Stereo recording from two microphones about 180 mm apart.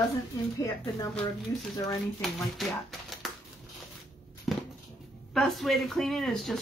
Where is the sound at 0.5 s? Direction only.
15° left (ahead or behind).